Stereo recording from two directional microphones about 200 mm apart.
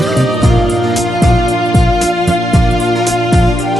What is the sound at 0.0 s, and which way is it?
Music, centre (ahead or behind).